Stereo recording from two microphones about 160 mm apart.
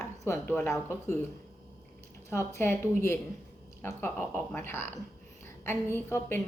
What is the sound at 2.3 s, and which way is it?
Speech, 15° left (ahead or behind).